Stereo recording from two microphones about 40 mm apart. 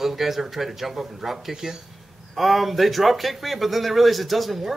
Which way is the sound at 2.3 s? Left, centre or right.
Centre.